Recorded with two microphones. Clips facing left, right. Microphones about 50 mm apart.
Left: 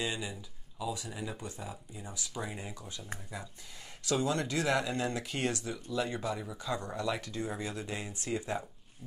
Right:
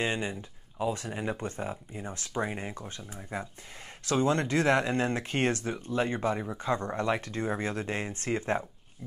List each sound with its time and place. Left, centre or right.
0.0 s speech: right